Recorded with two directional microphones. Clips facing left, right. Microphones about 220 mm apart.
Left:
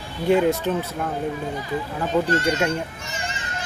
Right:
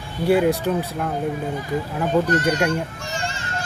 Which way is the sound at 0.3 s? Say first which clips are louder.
Right 1 dB; 5° right (ahead or behind).